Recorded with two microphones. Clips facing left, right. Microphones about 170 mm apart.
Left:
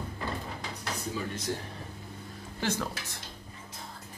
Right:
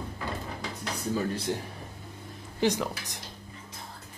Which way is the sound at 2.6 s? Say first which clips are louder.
Right 5 dB; 15° right (ahead or behind).